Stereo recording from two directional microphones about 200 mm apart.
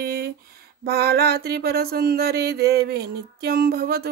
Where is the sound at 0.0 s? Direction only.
50° right (ahead or behind).